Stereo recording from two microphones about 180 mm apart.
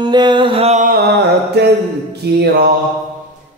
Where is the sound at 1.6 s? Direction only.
65° right (ahead or behind).